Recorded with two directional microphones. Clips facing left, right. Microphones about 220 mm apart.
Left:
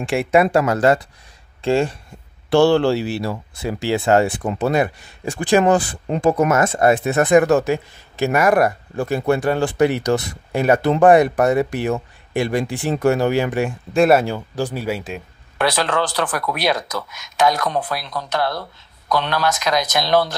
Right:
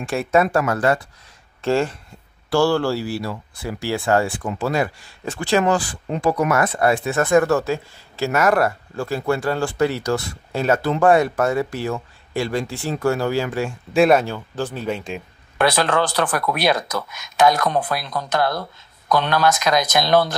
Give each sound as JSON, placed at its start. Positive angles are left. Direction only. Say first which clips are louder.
{"t": 0.1, "sound": "speech", "louder": "left 2 dB", "side_deg": 15}
{"t": 13.9, "sound": "speech", "louder": "left 1 dB", "side_deg": 5}
{"t": 15.6, "sound": "speech", "louder": "right 1 dB", "side_deg": -50}